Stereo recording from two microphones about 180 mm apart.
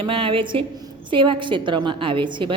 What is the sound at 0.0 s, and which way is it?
Speech, 30° right (ahead or behind).